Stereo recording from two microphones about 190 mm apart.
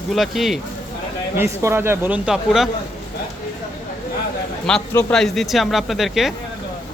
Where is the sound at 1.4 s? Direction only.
15° right (ahead or behind).